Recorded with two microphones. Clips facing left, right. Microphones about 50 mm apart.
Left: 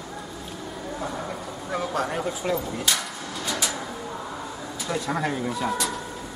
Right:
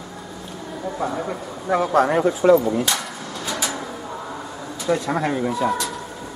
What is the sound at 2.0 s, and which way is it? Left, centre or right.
Speech, right.